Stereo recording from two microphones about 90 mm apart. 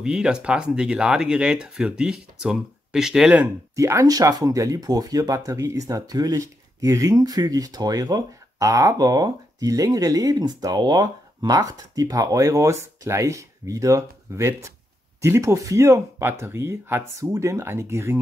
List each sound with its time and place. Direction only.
0.0 s speech: 10° right (ahead or behind)
3.7 s speech: 35° right (ahead or behind)